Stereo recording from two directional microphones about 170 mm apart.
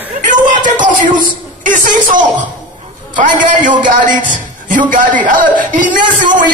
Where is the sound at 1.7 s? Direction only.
50° right (ahead or behind).